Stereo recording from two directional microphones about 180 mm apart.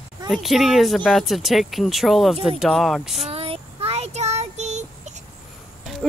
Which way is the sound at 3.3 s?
35° right (ahead or behind).